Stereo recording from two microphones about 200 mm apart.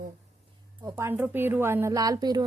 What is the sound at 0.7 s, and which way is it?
A woman's voice, 15° right (ahead or behind).